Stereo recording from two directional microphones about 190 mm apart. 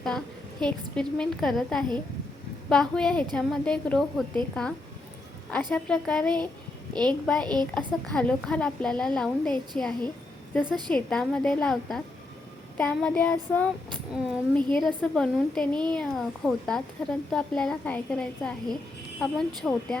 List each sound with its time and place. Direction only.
0.6 s speech: 5° left (ahead or behind)
5.7 s speech: 5° left (ahead or behind)
7.4 s speech: 20° right (ahead or behind)
7.7 s speech: 5° left (ahead or behind)
10.7 s speech: 25° right (ahead or behind)
10.9 s speech: 5° left (ahead or behind)
12.7 s child singing: 5° left (ahead or behind)
14.1 s speech: centre (ahead or behind)